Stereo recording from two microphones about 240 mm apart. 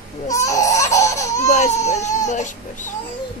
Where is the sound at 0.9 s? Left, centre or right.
Centre.